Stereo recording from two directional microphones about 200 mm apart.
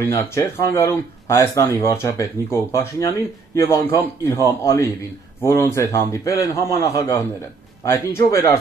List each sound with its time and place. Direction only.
0.3 s speech: 15° left (ahead or behind)